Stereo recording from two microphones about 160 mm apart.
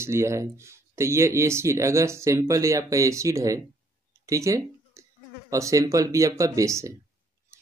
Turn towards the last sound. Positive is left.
turn(degrees=-20)  # may be behind; listen again after turning